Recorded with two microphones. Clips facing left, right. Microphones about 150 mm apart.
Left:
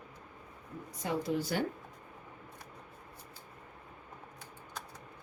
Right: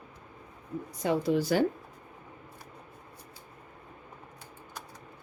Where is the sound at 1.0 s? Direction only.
90° right.